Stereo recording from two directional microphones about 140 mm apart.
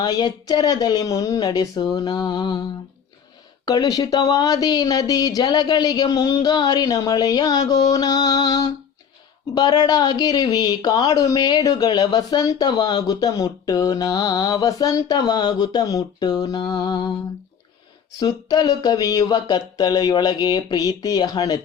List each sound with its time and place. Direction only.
0.0 s speech: 30° left (ahead or behind)
3.7 s speech: 25° left (ahead or behind)
18.2 s speech: 30° left (ahead or behind)